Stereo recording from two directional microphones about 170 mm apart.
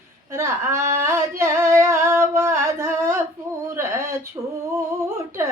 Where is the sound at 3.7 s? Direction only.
15° right (ahead or behind).